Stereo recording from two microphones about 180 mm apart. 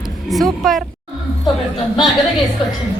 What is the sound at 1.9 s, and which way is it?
Speech, centre (ahead or behind).